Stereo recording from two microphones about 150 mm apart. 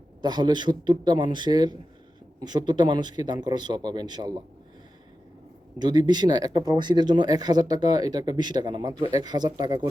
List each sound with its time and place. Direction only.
0.2 s speech: 30° right (ahead or behind)
5.8 s speech: 30° right (ahead or behind)